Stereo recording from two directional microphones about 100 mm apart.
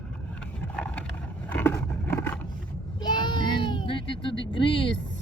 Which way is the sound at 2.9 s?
50° left (ahead or behind).